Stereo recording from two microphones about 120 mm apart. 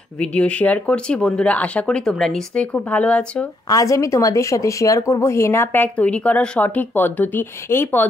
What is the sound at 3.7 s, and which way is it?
Speech, 30° left (ahead or behind).